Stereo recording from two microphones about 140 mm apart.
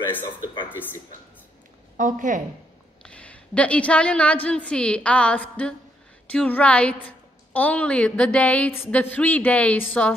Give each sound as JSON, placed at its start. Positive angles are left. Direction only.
{"t": 0.7, "sound": "a woman's voice", "side_deg": 15}
{"t": 2.0, "sound": "a woman's voice", "side_deg": -65}
{"t": 3.0, "sound": "a woman's voice", "side_deg": 10}